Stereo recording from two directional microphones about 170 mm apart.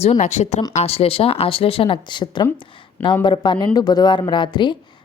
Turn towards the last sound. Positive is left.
turn(degrees=25)  # may be behind; listen again after turning